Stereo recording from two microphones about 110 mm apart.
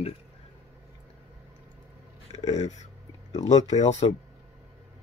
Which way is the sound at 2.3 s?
90° left.